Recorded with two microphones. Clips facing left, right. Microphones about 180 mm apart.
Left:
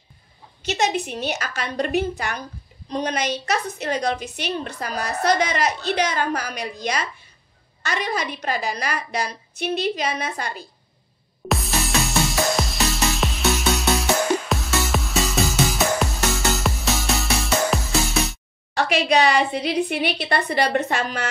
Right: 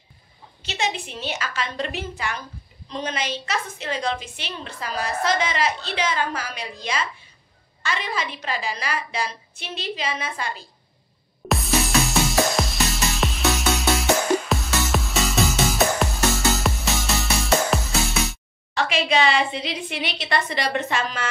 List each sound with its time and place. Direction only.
0.7 s a woman's voice: 40° left (ahead or behind)
11.4 s music: centre (ahead or behind)
18.8 s a woman's voice: 40° left (ahead or behind)